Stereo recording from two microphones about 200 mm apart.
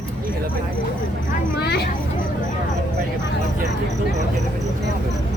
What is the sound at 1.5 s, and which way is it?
Speech, 55° left (ahead or behind).